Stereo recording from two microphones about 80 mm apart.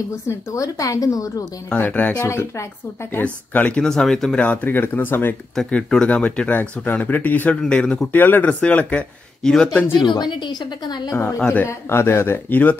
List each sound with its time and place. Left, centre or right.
0.3 s a woman's voice: left
1.7 s speech: left
2.2 s speech: left
3.1 s speech: left
3.8 s speech: centre
4.4 s speech: centre
5.7 s speech: centre
8.1 s speech: left
9.9 s a woman's voice: left
11.6 s speech: left